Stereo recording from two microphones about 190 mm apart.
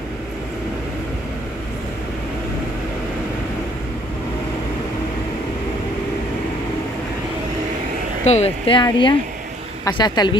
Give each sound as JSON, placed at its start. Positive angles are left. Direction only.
{"t": 8.3, "sound": "speech", "side_deg": 30}